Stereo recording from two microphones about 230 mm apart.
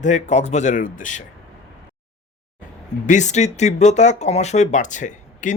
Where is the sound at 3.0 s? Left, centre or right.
Left.